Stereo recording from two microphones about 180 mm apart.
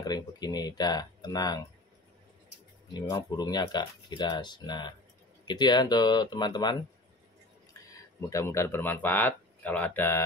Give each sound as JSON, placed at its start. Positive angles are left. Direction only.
{"t": 0.0, "sound": "speech", "side_deg": 20}
{"t": 2.9, "sound": "speech", "side_deg": 20}
{"t": 7.9, "sound": "speech", "side_deg": 15}